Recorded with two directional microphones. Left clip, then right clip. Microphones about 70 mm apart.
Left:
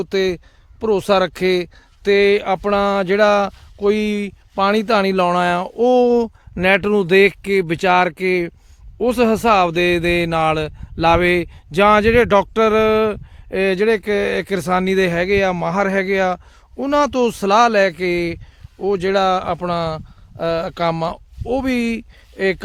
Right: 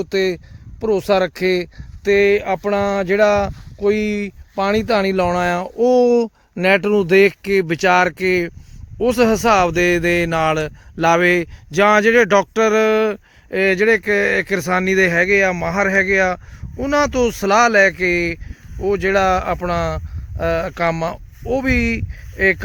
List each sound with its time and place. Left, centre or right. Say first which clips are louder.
0.0 s speech: even; centre
6.1 s speech: right 1 dB; centre
11.7 s speech: even; left